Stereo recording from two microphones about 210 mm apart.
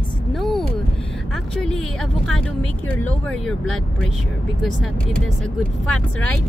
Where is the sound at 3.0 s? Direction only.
5° left (ahead or behind).